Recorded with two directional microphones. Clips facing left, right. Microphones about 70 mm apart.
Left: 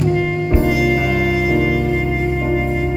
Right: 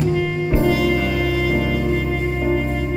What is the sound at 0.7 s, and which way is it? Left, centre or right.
Music, centre.